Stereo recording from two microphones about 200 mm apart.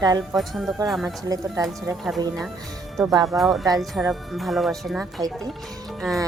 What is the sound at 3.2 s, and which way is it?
A woman's voice, centre (ahead or behind).